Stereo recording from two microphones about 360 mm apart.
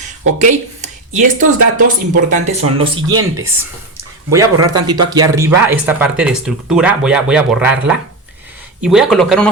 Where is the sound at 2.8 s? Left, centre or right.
Centre.